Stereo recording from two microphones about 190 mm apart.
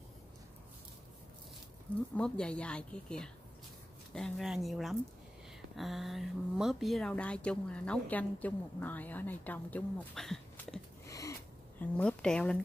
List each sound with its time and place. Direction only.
2.1 s a woman's voice: 5° left (ahead or behind)
11.1 s a sound: 15° left (ahead or behind)
11.8 s a woman's voice: 5° left (ahead or behind)